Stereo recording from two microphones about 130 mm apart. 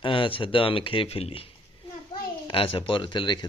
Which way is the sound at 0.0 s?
40° left (ahead or behind).